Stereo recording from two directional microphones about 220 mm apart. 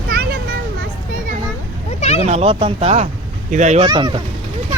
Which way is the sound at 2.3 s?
25° right (ahead or behind).